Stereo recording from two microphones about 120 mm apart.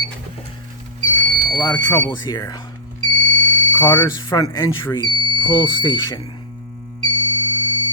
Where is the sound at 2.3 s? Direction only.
30° left (ahead or behind).